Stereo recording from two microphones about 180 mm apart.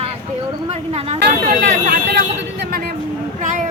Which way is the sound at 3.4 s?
45° right (ahead or behind).